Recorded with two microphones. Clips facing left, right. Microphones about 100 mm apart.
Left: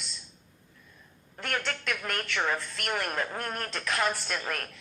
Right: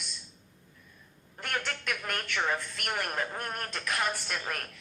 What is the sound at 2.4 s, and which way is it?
A woman's voice, 50° left (ahead or behind).